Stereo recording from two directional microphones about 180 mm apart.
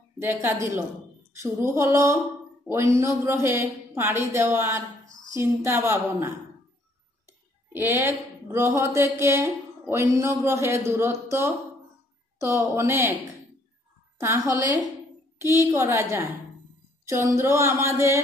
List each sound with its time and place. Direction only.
0.2 s speech: 10° right (ahead or behind)
7.7 s speech: 10° right (ahead or behind)
14.1 s speech: 15° right (ahead or behind)